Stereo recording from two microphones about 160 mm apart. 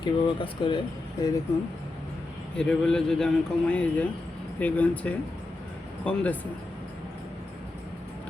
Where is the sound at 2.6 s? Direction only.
5° left (ahead or behind).